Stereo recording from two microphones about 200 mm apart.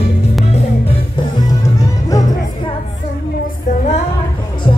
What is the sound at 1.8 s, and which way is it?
Music, 15° left (ahead or behind).